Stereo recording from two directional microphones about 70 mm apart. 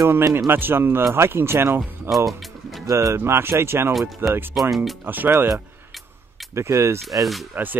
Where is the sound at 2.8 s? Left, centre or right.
Right.